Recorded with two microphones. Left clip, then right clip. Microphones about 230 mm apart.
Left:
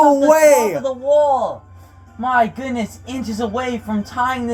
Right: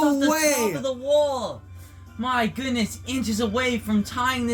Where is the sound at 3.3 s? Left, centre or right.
Right.